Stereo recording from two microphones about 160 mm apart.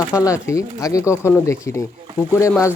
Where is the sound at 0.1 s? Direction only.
20° left (ahead or behind).